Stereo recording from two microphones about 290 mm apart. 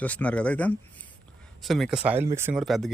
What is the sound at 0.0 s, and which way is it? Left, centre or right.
Speech, centre.